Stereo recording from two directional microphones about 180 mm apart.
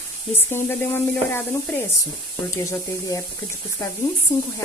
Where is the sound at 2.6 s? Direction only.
15° left (ahead or behind).